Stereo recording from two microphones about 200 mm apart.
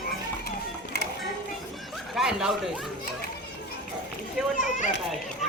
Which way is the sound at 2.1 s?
Centre (ahead or behind).